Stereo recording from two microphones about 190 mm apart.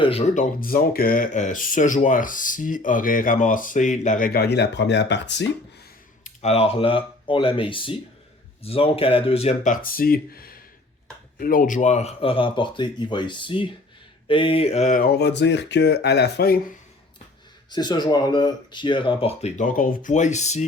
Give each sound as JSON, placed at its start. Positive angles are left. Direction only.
{"t": 0.0, "sound": "speech", "side_deg": 30}
{"t": 0.6, "sound": "speech", "side_deg": 50}
{"t": 6.2, "sound": "speech", "side_deg": 35}
{"t": 17.7, "sound": "speech", "side_deg": 20}